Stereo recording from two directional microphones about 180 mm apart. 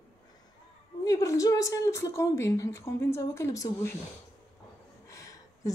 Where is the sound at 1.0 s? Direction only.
20° left (ahead or behind).